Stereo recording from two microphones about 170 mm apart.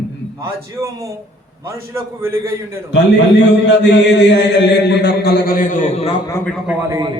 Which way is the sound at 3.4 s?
90° left.